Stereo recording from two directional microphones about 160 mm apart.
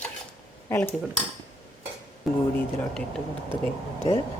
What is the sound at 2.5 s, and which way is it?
Speech, 5° left (ahead or behind).